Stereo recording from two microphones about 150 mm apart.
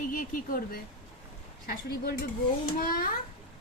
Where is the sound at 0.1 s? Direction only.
65° left (ahead or behind).